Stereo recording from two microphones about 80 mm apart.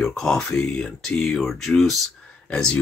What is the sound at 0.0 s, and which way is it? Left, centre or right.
Speech, centre.